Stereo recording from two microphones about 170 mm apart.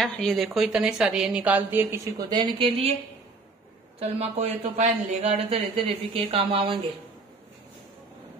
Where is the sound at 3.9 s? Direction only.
40° right (ahead or behind).